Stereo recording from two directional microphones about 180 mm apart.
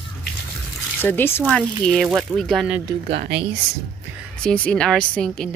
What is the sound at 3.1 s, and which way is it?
Speech, 70° right (ahead or behind).